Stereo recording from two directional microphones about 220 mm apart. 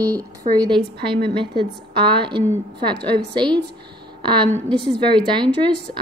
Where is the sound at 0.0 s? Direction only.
15° right (ahead or behind).